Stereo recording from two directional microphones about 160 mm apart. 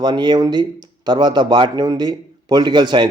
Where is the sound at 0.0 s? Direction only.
25° right (ahead or behind).